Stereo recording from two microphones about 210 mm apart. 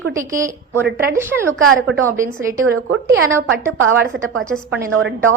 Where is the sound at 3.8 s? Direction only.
70° right (ahead or behind).